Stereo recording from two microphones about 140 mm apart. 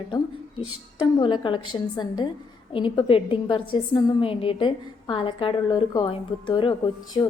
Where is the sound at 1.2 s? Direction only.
35° left (ahead or behind).